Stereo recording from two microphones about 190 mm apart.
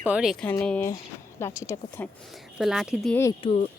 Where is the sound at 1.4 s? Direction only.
15° left (ahead or behind).